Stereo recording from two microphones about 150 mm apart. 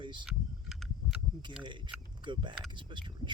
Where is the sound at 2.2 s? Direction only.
30° right (ahead or behind).